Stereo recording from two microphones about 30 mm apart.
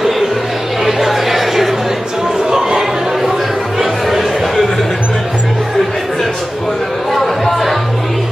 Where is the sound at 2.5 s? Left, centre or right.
Centre.